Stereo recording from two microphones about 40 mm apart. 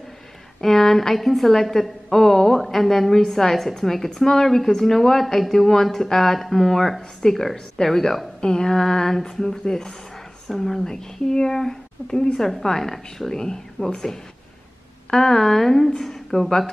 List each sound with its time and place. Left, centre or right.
0.6 s speech: centre